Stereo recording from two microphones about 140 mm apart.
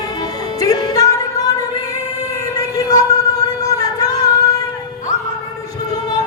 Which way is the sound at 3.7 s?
25° left (ahead or behind).